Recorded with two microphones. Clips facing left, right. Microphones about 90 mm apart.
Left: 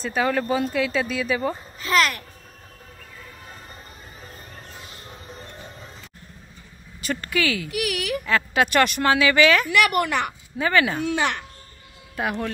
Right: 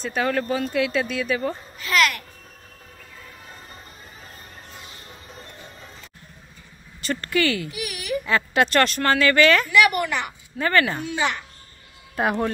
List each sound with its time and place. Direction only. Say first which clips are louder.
0.0 s speech: left 1 dB; centre (ahead or behind)
1.8 s a child's voice: even; 30° left (ahead or behind)
7.0 s speech: right 2 dB; 5° left (ahead or behind)
7.7 s a woman's voice: left 2 dB; 70° left (ahead or behind)
8.3 s speech: right 1 dB; centre (ahead or behind)
8.7 s speech: left 2 dB; 10° left (ahead or behind)
9.7 s a woman's voice: right 1 dB; 60° left (ahead or behind)
10.6 s speech: even; 10° left (ahead or behind)
11.1 s a woman's voice: left 1 dB; 60° left (ahead or behind)
12.2 s speech: right 4 dB; 30° right (ahead or behind)